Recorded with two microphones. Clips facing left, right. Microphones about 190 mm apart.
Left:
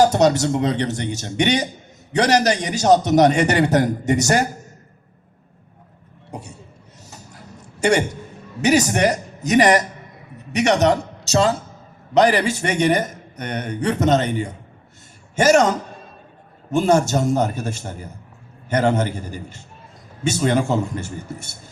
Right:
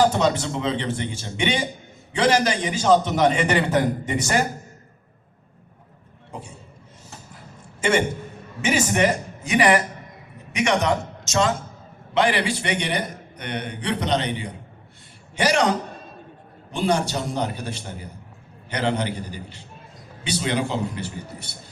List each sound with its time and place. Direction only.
0.0 s a man's voice: 45° left (ahead or behind)
7.8 s a man's voice: 40° left (ahead or behind)
16.7 s a man's voice: 45° left (ahead or behind)